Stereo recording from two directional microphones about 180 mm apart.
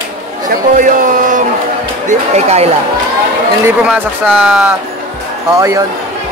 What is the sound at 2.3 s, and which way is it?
Speech, 35° right (ahead or behind).